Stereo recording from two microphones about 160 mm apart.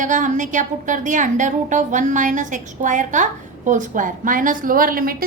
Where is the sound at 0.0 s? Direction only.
50° right (ahead or behind).